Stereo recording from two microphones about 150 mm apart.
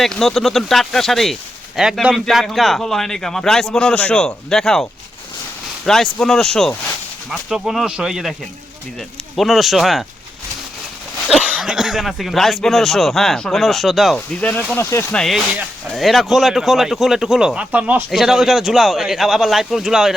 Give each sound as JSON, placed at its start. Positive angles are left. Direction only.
{"t": 0.0, "sound": "speech", "side_deg": 0}
{"t": 11.3, "sound": "speech", "side_deg": -5}
{"t": 14.7, "sound": "speech", "side_deg": 15}
{"t": 15.1, "sound": "speech", "side_deg": 0}